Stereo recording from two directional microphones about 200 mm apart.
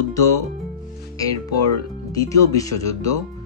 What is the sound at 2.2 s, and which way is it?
Speech, 15° left (ahead or behind).